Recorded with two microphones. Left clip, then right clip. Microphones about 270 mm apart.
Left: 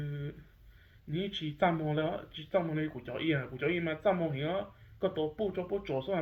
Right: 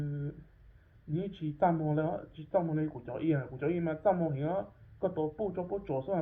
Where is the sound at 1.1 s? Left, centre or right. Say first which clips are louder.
Left 1 dB; left.